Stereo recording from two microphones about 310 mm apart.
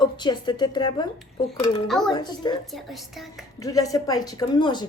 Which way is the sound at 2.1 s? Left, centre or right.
Centre.